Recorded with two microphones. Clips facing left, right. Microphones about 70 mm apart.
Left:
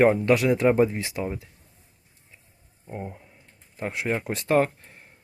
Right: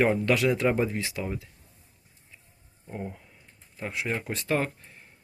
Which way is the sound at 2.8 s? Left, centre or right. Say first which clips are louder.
Left 1 dB; centre.